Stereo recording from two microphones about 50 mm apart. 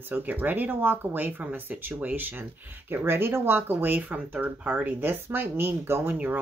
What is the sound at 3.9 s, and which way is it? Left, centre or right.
Speech, right.